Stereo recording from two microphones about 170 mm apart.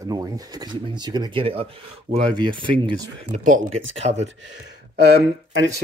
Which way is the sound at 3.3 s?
45° right (ahead or behind).